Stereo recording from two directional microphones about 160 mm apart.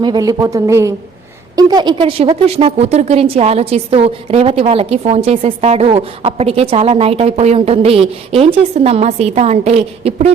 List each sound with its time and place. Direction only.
0.0 s a woman's voice: 25° right (ahead or behind)